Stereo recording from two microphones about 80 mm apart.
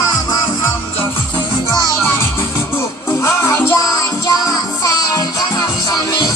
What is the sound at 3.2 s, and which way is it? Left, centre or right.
Music, left.